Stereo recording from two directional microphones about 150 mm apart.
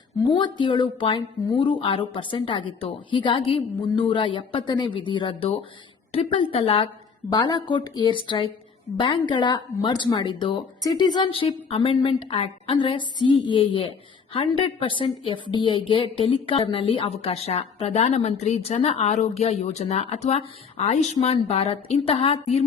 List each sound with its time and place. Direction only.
0.3 s speech: 30° left (ahead or behind)
7.3 s a woman's voice: 25° left (ahead or behind); by 22.6 s 45° left (ahead or behind)